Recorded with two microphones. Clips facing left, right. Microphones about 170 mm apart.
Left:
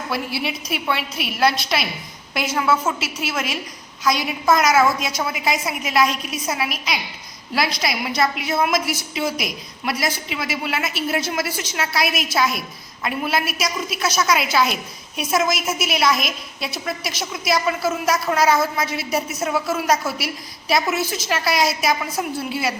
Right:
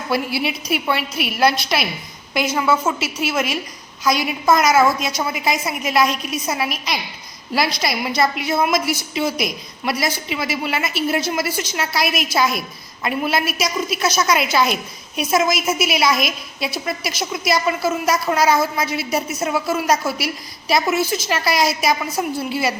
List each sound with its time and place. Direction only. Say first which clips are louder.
0.1 s a woman's voice: right 5 dB; 5° right (ahead or behind)